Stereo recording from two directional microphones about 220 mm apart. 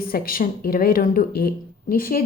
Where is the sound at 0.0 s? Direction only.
40° left (ahead or behind).